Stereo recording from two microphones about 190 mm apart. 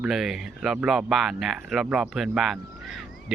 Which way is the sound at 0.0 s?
Centre (ahead or behind).